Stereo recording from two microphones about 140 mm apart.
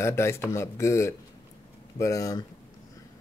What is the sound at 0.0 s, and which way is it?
Speech, 20° left (ahead or behind).